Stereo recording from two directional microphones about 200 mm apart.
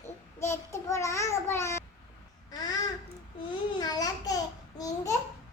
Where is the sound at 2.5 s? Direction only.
20° left (ahead or behind).